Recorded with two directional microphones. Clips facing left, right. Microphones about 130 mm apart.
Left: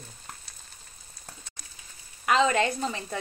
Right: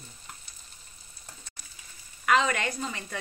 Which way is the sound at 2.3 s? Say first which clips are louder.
Left 3 dB; 30° left (ahead or behind).